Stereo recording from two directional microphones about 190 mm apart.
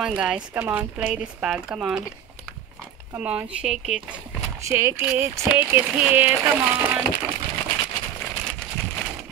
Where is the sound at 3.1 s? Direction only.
5° right (ahead or behind).